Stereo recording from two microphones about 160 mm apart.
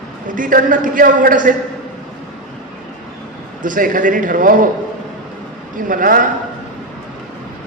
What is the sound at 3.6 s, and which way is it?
A man's voice, 55° right (ahead or behind).